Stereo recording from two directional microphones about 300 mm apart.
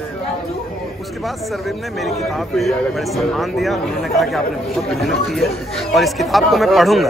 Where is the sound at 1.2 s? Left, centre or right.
Centre.